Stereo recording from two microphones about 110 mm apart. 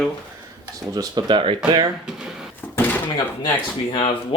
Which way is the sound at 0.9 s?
40° right (ahead or behind).